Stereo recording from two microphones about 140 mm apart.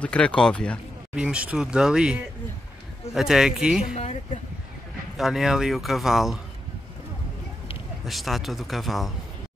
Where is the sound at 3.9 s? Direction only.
55° left (ahead or behind).